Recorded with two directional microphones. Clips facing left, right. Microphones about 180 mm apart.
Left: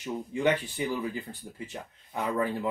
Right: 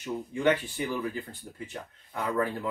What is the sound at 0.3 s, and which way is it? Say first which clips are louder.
Speech: right 1 dB; 15° left (ahead or behind).